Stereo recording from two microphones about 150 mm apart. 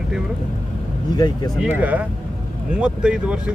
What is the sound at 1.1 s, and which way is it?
Speech, 25° left (ahead or behind).